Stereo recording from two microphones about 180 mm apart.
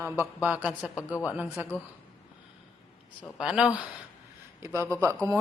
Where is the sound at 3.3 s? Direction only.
5° right (ahead or behind).